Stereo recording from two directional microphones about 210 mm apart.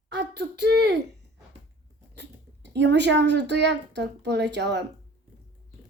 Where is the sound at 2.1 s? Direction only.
55° right (ahead or behind).